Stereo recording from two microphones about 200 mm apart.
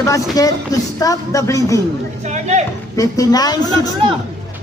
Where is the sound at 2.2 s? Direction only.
35° right (ahead or behind).